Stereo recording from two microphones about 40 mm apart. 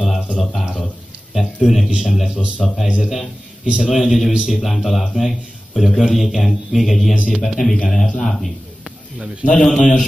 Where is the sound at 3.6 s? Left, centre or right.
Right.